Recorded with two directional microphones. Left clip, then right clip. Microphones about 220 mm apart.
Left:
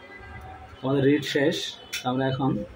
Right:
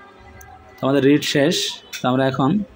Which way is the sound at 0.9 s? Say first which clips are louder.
Right 6 dB; 45° right (ahead or behind).